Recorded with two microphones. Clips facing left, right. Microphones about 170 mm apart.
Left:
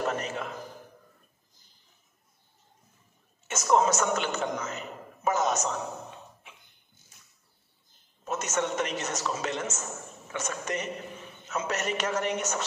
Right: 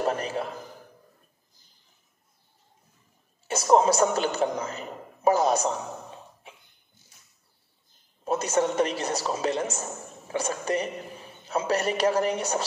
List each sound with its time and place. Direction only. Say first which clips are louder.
0.0 s a man's voice: right 3 dB; 35° right (ahead or behind)
3.4 s a man's voice: right 4 dB; 35° right (ahead or behind)
8.2 s a man's voice: right 6 dB; 35° right (ahead or behind)